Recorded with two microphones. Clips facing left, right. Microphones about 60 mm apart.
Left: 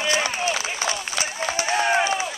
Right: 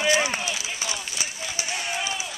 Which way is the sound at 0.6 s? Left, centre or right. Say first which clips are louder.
Left 5 dB; left.